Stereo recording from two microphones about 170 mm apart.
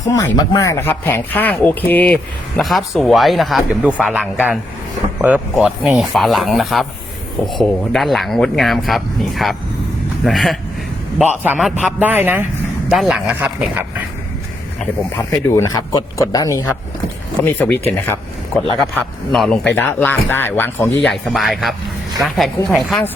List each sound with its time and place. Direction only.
0.0 s a man's voice: 20° left (ahead or behind); by 13.7 s 5° right (ahead or behind)
15.1 s speech: 15° left (ahead or behind)
17.4 s speech: 10° left (ahead or behind)
21.1 s speech: centre (ahead or behind)